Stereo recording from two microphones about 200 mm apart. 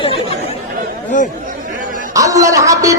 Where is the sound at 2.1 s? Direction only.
15° right (ahead or behind).